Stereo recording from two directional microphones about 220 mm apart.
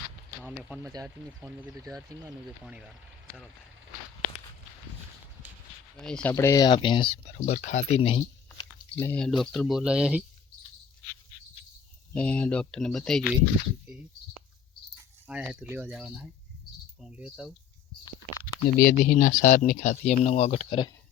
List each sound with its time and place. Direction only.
0.9 s speech: 10° right (ahead or behind)
6.0 s speech: 5° left (ahead or behind)
6.3 s speech: 15° left (ahead or behind)
8.4 s chewing: 10° left (ahead or behind)
9.4 s speech: centre (ahead or behind)
12.1 s speech: 5° left (ahead or behind)
15.3 s speech: 5° right (ahead or behind)
18.4 s speech: 40° left (ahead or behind); by 20.9 s 25° left (ahead or behind)